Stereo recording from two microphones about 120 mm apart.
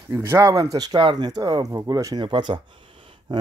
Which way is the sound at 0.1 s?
20° right (ahead or behind).